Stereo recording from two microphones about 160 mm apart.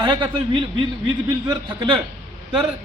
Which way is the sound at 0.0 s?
30° right (ahead or behind).